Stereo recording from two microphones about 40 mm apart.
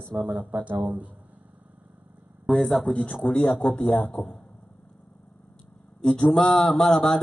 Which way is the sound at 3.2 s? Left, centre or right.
Left.